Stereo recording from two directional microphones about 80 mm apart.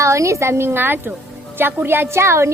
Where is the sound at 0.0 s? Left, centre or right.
Right.